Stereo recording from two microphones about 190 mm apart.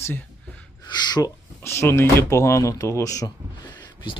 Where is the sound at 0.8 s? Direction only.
20° left (ahead or behind).